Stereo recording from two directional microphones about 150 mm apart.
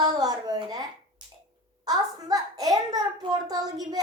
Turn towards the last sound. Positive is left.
turn(degrees=-25)  # may be behind; listen again after turning